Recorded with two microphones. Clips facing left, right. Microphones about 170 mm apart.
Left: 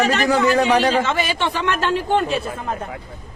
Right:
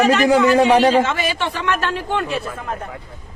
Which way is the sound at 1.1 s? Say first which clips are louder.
Left 1 dB; 30° left (ahead or behind).